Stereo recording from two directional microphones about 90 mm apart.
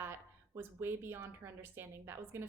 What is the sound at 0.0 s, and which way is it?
A woman's voice, 25° right (ahead or behind).